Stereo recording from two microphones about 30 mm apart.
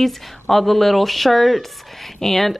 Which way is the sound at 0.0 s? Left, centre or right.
Centre.